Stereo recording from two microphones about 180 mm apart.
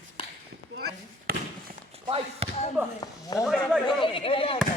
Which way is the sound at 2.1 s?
35° right (ahead or behind).